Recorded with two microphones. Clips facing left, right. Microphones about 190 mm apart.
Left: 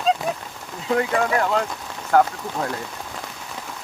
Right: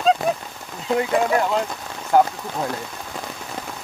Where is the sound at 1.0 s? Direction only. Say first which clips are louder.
Right 2 dB; 15° right (ahead or behind).